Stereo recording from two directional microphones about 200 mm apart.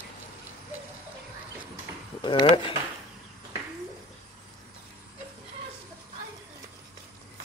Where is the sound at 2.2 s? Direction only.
25° left (ahead or behind).